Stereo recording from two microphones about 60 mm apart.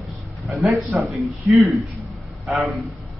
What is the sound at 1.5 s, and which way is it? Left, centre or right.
Speech, centre.